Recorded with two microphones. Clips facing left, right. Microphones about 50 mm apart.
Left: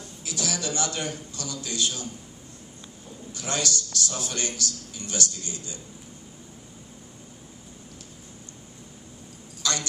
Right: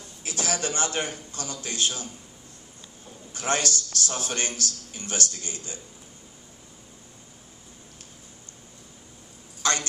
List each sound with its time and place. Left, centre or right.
0.2 s a man's voice: right
3.3 s a man's voice: right
9.6 s a sound: right